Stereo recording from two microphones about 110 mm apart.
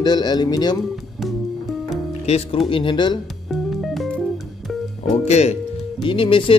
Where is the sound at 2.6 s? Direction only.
50° left (ahead or behind).